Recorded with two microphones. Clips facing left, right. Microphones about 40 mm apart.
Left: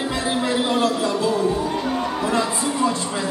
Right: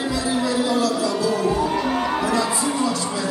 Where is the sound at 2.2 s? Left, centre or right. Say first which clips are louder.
Even; left.